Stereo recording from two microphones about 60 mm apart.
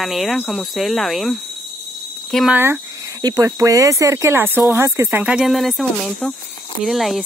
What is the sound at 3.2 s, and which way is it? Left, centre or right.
Speech, right.